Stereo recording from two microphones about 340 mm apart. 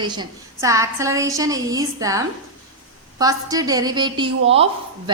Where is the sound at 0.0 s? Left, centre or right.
Centre.